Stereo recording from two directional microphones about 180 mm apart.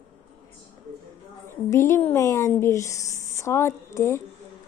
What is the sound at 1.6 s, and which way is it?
Speech, 15° left (ahead or behind).